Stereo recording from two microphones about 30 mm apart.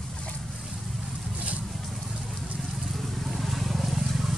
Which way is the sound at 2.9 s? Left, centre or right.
Centre.